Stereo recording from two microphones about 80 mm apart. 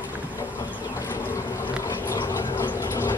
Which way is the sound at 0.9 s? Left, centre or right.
Left.